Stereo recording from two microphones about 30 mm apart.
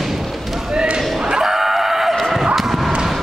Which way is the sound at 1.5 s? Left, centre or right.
Centre.